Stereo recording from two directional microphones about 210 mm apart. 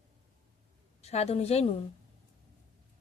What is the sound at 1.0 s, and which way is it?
Speech, 30° left (ahead or behind).